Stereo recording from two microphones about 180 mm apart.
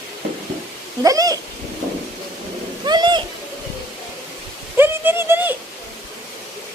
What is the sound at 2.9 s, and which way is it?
Owl, 25° right (ahead or behind).